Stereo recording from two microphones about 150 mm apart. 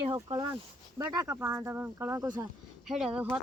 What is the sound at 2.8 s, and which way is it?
Speech, 5° right (ahead or behind).